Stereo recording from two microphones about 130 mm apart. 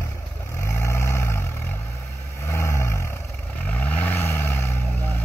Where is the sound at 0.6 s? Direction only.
20° left (ahead or behind).